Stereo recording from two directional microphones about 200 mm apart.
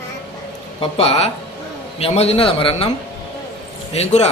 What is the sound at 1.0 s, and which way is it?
A man's voice, 30° left (ahead or behind).